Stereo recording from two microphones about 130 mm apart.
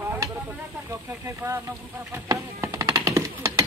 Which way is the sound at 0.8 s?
20° right (ahead or behind).